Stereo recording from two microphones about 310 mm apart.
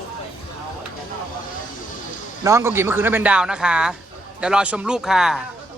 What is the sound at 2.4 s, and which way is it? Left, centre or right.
Speech, centre.